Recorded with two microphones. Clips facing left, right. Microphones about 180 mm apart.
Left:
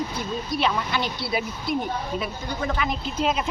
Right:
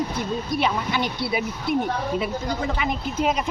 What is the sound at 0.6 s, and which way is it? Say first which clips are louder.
Speech: even; 15° right (ahead or behind).